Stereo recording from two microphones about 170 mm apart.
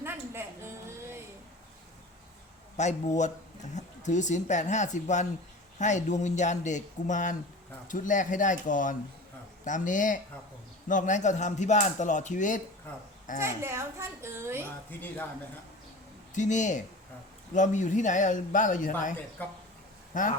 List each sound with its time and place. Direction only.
0.0 s a sound: 15° right (ahead or behind)
2.8 s speech: 45° left (ahead or behind)
13.4 s a child's voice: 15° right (ahead or behind)
14.8 s speech: 10° left (ahead or behind)
16.3 s speech: 45° left (ahead or behind)
19.4 s speech: 10° left (ahead or behind)
20.1 s speech: 50° left (ahead or behind)